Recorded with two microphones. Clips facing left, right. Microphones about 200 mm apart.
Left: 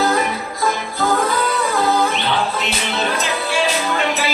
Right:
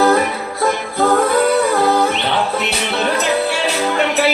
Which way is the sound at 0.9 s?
60° right (ahead or behind).